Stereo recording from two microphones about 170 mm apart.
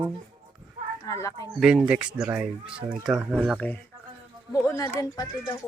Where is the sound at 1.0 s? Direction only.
20° left (ahead or behind).